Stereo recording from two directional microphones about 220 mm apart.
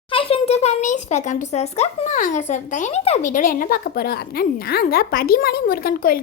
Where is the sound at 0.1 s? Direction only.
25° left (ahead or behind).